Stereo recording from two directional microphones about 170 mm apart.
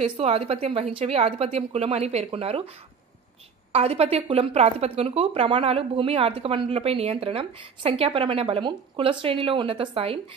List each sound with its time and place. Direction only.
0.0 s speech: 35° right (ahead or behind)
3.7 s speech: 35° right (ahead or behind)